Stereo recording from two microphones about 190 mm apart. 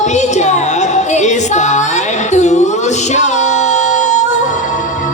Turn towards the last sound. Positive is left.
turn(degrees=40)  # may be behind; listen again after turning